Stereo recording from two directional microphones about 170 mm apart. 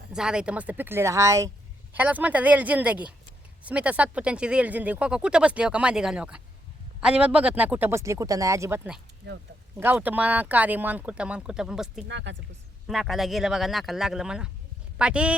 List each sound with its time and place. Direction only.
0.1 s speech: 5° right (ahead or behind)
9.2 s speech: 80° right
9.7 s speech: 10° right (ahead or behind)
12.0 s speech: 90° right
12.9 s speech: centre (ahead or behind)